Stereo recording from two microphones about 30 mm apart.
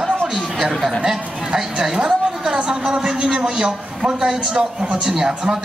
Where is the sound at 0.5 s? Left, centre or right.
Centre.